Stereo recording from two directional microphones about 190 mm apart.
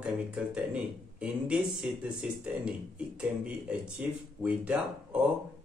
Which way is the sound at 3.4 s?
5° right (ahead or behind).